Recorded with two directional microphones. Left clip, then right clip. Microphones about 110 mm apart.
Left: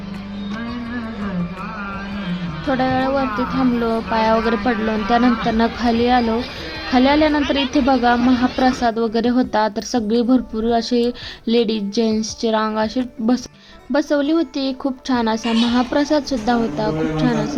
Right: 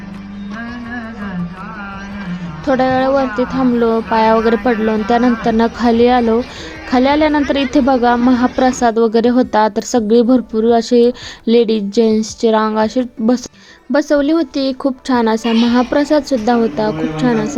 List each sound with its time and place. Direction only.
2.6 s a woman's voice: 40° right (ahead or behind)